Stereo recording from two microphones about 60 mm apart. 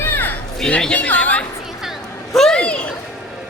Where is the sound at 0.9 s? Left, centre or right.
Left.